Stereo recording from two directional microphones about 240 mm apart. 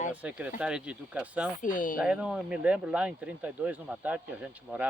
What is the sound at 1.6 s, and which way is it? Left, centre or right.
Speech, left.